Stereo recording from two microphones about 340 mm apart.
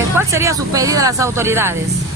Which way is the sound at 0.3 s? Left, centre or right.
Centre.